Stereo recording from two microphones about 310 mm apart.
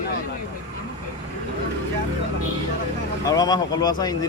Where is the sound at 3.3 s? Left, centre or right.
Centre.